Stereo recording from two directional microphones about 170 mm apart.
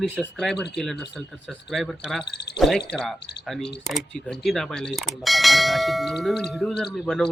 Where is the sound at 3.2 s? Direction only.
75° left (ahead or behind).